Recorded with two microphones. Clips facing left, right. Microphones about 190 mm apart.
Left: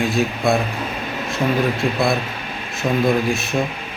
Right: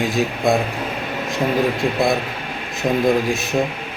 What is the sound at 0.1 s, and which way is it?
Speech, 15° right (ahead or behind).